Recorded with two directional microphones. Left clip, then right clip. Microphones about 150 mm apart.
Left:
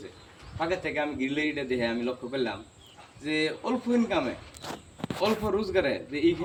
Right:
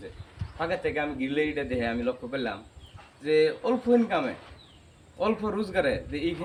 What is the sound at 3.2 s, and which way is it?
Speech, 20° right (ahead or behind).